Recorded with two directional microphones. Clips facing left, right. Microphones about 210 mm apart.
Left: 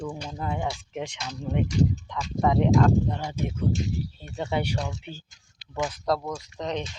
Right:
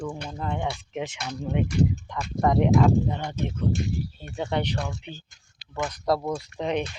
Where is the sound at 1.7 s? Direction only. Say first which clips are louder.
Even; 55° right (ahead or behind).